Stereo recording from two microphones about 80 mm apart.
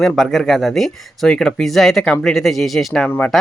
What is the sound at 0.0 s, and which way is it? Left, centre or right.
Speech, centre.